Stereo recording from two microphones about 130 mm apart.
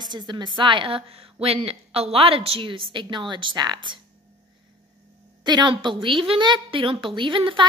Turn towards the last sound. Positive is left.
turn(degrees=-40)  # may be behind; listen again after turning